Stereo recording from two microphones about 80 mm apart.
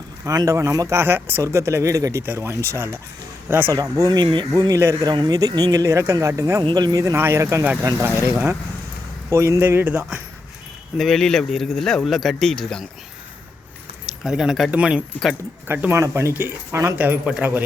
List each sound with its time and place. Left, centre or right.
0.3 s a man's voice: right
2.2 s a man's voice: right
3.9 s speech: right
4.7 s a man's voice: right
5.0 s speech: right
6.6 s speech: right
6.9 s a man's voice: right
10.9 s speech: centre
14.1 s speech: centre
14.7 s speech: centre
15.9 s a man's voice: right